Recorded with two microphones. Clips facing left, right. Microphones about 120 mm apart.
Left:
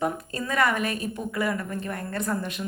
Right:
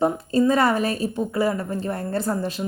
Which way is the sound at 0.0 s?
30° right (ahead or behind).